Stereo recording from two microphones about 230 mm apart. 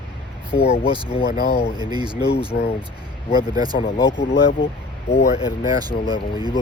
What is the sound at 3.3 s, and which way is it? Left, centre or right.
Speech, centre.